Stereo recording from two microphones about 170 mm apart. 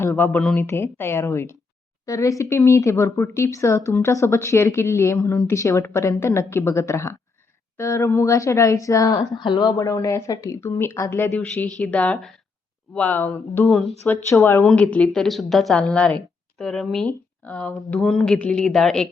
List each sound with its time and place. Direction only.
0.1 s speech: 5° left (ahead or behind)
13.7 s a woman's voice: centre (ahead or behind)
14.0 s a woman's voice: 15° left (ahead or behind)